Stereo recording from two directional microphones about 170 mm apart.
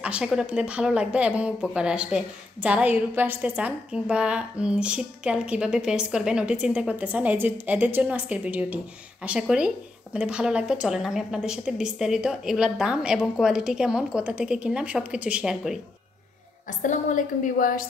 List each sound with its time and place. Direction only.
0.0 s a woman's voice: 5° right (ahead or behind)
16.6 s a woman's voice: 45° left (ahead or behind)